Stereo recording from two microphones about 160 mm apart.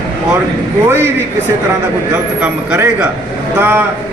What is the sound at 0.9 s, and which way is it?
Speech, 15° right (ahead or behind).